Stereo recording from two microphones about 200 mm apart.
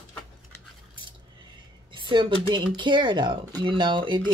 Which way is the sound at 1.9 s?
25° right (ahead or behind).